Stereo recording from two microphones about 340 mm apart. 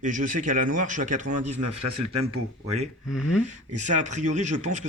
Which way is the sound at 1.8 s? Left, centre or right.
Right.